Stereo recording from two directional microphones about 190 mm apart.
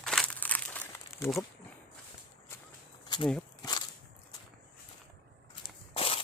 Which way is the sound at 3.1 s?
25° left (ahead or behind).